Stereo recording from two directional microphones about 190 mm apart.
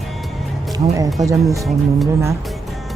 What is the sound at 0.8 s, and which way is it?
Speech, 30° right (ahead or behind).